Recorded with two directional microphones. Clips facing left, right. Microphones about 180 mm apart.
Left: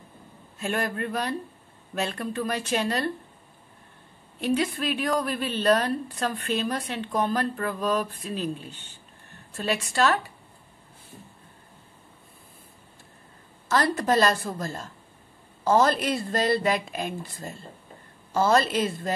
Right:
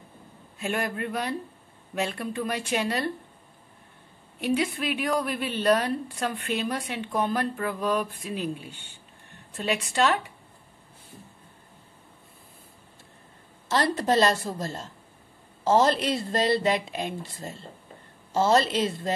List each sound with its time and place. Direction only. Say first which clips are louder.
0.6 s a woman's voice: left 1 dB; 10° right (ahead or behind)
4.4 s a woman's voice: left 1 dB; 15° right (ahead or behind)
13.7 s a woman's voice: left 1 dB; 25° right (ahead or behind)